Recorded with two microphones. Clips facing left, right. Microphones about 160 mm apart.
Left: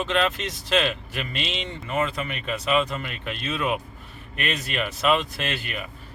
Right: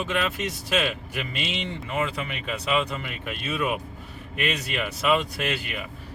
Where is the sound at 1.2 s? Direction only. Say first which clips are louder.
Even; 15° right (ahead or behind).